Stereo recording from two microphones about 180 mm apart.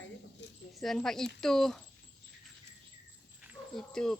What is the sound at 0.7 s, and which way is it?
Speech, centre (ahead or behind).